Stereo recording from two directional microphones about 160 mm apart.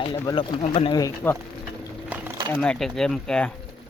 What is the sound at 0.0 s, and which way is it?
Speech, 30° left (ahead or behind).